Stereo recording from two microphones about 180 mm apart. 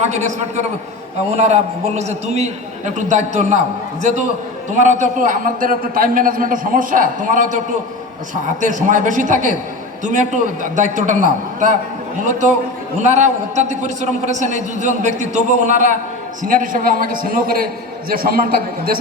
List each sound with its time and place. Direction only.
0.0 s a man's voice: 40° right (ahead or behind)
8.6 s a man's voice: 45° right (ahead or behind)